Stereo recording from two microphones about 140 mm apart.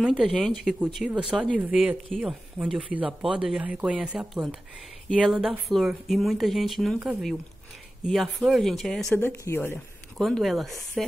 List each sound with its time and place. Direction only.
0.0 s speech: 5° right (ahead or behind)
9.1 s speech: 15° left (ahead or behind)
10.1 s speech: centre (ahead or behind)